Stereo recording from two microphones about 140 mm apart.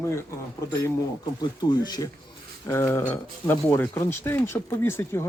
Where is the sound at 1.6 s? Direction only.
30° left (ahead or behind).